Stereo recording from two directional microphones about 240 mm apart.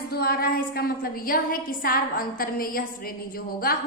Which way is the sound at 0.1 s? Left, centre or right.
Left.